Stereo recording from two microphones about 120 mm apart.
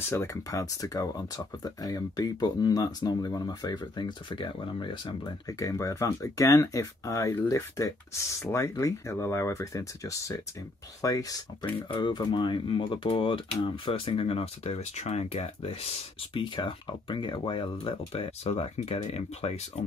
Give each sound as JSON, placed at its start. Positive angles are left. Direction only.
{"t": 0.1, "sound": "speech", "side_deg": 25}
{"t": 5.5, "sound": "speech", "side_deg": 25}
{"t": 11.9, "sound": "speech", "side_deg": 40}
{"t": 16.3, "sound": "speech", "side_deg": 45}